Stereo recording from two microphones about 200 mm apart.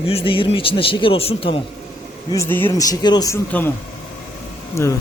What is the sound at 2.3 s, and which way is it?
Speech, 10° left (ahead or behind).